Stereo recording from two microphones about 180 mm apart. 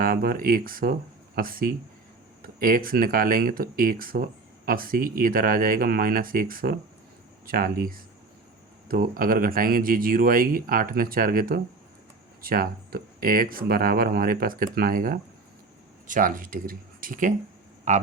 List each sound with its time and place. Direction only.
0.0 s speech: 55° right (ahead or behind)